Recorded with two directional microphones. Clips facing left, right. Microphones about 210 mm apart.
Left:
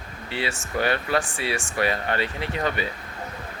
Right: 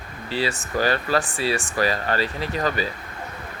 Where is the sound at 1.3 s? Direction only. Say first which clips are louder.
Right 4 dB; 30° right (ahead or behind).